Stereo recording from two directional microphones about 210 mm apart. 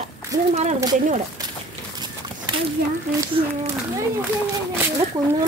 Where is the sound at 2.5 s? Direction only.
20° right (ahead or behind).